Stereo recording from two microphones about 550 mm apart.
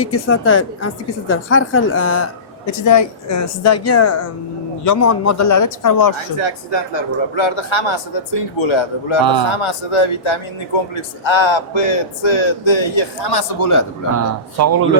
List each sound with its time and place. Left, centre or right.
0.0 s a woman's voice: left
6.3 s a man's voice: left
9.2 s a man's voice: right
9.5 s a man's voice: left
14.6 s speech: right